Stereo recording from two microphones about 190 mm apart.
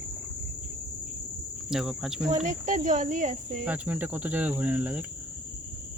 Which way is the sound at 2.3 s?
40° right (ahead or behind).